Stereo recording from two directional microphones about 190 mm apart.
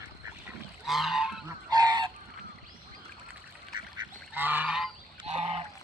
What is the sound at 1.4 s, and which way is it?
Goose, 20° right (ahead or behind).